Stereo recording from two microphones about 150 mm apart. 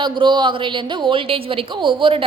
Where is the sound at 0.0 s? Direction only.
30° right (ahead or behind).